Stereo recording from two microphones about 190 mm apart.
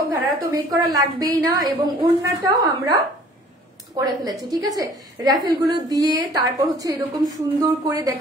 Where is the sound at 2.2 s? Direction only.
20° right (ahead or behind).